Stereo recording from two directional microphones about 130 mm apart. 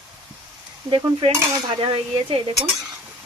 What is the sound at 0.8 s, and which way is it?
Speech, 35° right (ahead or behind).